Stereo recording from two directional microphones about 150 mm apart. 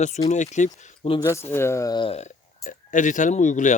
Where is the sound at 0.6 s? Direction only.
55° left (ahead or behind).